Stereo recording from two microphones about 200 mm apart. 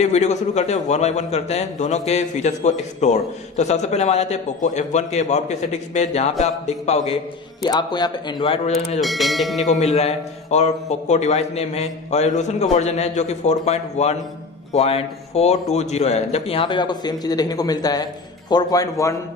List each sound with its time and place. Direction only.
0.0 s a man's voice: 35° left (ahead or behind)
7.6 s a man's voice: 20° left (ahead or behind)
9.0 s speech: centre (ahead or behind)
9.9 s a man's voice: 35° left (ahead or behind); by 19.1 s 15° left (ahead or behind)